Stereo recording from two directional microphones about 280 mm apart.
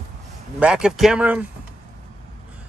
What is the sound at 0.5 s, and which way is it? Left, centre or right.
Speech, centre.